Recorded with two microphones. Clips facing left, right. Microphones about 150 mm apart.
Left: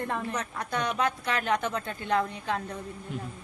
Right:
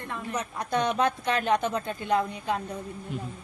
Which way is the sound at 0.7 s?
25° right (ahead or behind).